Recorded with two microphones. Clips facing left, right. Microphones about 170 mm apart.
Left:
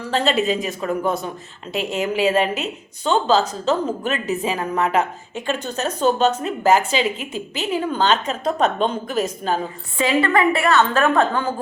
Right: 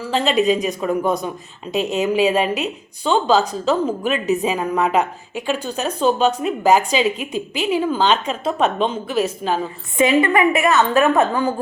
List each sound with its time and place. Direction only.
0.3 s a woman's voice: 15° right (ahead or behind)